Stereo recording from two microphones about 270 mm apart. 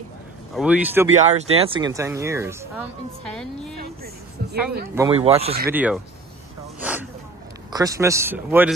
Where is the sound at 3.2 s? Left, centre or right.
Centre.